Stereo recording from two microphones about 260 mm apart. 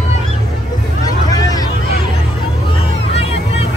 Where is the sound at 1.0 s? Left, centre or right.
Centre.